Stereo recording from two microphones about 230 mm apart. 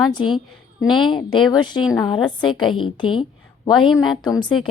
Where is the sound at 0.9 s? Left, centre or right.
Centre.